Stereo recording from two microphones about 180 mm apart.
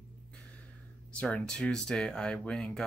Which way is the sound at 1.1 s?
5° left (ahead or behind).